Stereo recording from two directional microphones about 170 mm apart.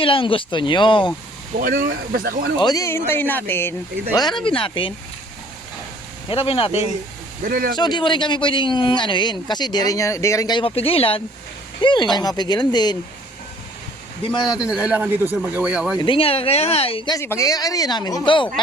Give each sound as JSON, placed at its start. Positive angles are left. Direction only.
{"t": 0.0, "sound": "speech", "side_deg": 30}
{"t": 1.5, "sound": "speech", "side_deg": -55}
{"t": 2.6, "sound": "speech", "side_deg": 20}
{"t": 4.2, "sound": "speech", "side_deg": 25}
{"t": 6.2, "sound": "speech", "side_deg": 35}
{"t": 7.4, "sound": "speech", "side_deg": -55}
{"t": 7.8, "sound": "speech", "side_deg": 25}
{"t": 14.5, "sound": "speech", "side_deg": -5}
{"t": 16.0, "sound": "speech", "side_deg": 30}
{"t": 17.2, "sound": "speech", "side_deg": 15}